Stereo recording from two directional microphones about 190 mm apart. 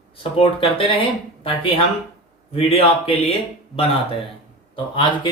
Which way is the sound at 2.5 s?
30° left (ahead or behind).